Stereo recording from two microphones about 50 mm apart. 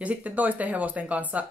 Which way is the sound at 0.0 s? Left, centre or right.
Right.